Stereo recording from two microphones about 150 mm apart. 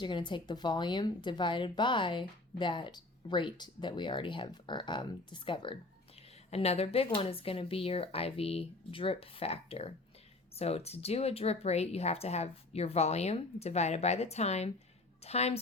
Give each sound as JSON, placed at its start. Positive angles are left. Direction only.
{"t": 0.0, "sound": "speech", "side_deg": 30}
{"t": 6.5, "sound": "speech", "side_deg": 45}